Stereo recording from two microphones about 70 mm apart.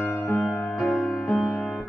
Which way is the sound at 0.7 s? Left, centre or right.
Centre.